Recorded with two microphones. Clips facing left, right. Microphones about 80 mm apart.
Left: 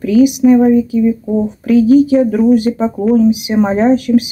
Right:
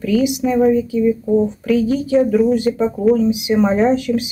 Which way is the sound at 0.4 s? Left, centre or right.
Centre.